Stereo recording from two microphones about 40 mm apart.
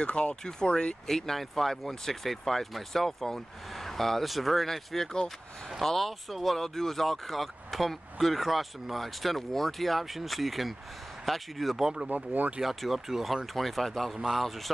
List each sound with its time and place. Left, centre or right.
0.0 s speech: left
1.0 s speech: centre
11.8 s speech: centre
12.1 s speech: right
12.6 s speech: centre
14.1 s speech: centre